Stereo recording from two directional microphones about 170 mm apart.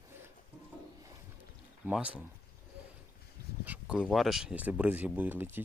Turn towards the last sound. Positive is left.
turn(degrees=-10)  # may be behind; listen again after turning